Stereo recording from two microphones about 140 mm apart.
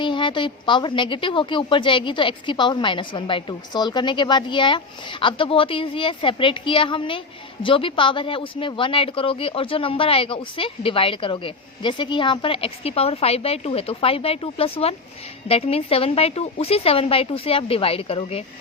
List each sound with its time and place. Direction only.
0.0 s a woman's voice: 35° left (ahead or behind)